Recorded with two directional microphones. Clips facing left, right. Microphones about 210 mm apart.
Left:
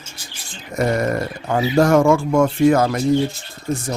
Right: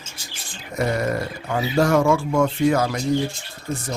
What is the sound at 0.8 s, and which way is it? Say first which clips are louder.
Speech: left 3 dB; 45° left (ahead or behind).